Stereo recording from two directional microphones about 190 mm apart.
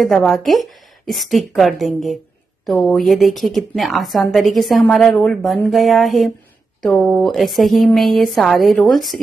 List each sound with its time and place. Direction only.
0.0 s a woman's voice: centre (ahead or behind)